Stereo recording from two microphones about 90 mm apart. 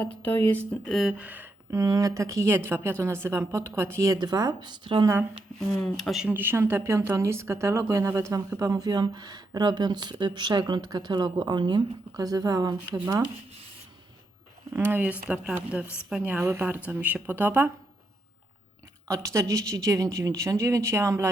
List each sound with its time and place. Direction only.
0.4 s speech: 20° left (ahead or behind)
0.9 s speech: centre (ahead or behind)
1.2 s speech: 20° right (ahead or behind)
1.7 s speech: 40° right (ahead or behind)
4.2 s speech: 50° right (ahead or behind)
5.5 s speech: centre (ahead or behind)
6.2 s speech: 20° right (ahead or behind); by 11.8 s 55° right (ahead or behind)
12.1 s speech: 40° right (ahead or behind)
14.7 s speech: 20° right (ahead or behind)
16.4 s speech: 30° right (ahead or behind)
19.0 s speech: 35° right (ahead or behind)